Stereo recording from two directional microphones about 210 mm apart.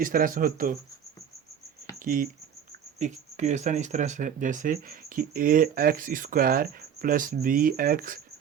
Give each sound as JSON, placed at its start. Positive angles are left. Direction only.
{"t": 0.0, "sound": "speech", "side_deg": -40}
{"t": 2.0, "sound": "speech", "side_deg": -40}